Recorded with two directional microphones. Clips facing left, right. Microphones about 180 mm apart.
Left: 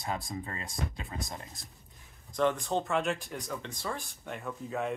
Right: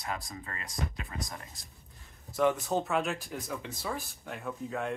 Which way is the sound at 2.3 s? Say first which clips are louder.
Right 1 dB; 10° right (ahead or behind).